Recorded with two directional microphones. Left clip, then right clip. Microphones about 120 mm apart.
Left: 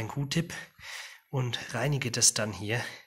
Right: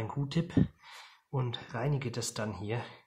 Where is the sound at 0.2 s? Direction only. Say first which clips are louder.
Right 3 dB; 15° left (ahead or behind).